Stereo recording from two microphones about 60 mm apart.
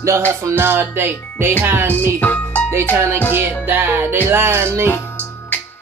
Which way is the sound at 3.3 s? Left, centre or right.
Right.